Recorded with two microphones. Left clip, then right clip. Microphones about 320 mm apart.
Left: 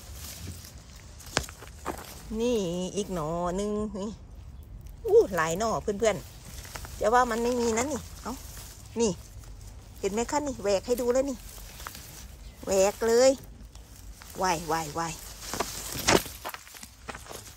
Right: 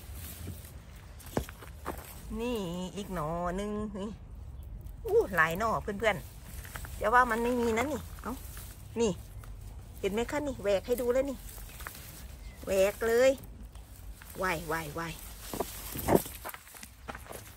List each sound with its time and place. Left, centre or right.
2.3 s speech: centre
11.9 s a sound: centre
12.6 s speech: centre
14.4 s speech: centre
15.5 s walk: centre
16.8 s walk: centre